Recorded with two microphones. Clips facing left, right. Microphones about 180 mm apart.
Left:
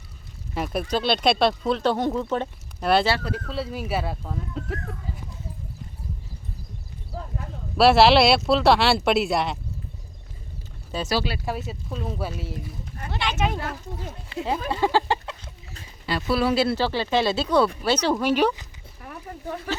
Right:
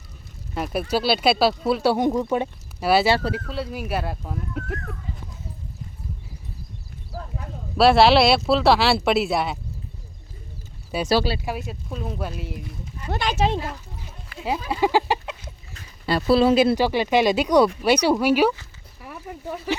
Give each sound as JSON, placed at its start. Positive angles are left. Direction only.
{"t": 0.5, "sound": "speech", "side_deg": 0}
{"t": 7.8, "sound": "speech", "side_deg": 0}
{"t": 10.9, "sound": "speech", "side_deg": -10}
{"t": 11.4, "sound": "speech", "side_deg": 0}
{"t": 13.1, "sound": "speech", "side_deg": -45}
{"t": 13.6, "sound": "speech", "side_deg": 70}
{"t": 14.3, "sound": "a sound", "side_deg": 25}
{"t": 14.7, "sound": "speech", "side_deg": -10}
{"t": 16.0, "sound": "speech", "side_deg": -35}
{"t": 16.4, "sound": "speech", "side_deg": -20}